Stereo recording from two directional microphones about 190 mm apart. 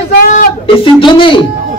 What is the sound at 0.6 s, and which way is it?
Speech, 30° left (ahead or behind).